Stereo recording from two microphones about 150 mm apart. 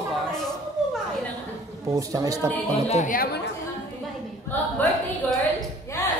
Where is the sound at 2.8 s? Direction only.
50° left (ahead or behind).